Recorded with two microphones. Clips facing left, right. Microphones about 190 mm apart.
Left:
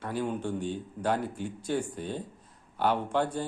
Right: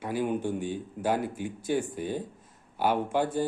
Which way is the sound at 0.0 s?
15° right (ahead or behind).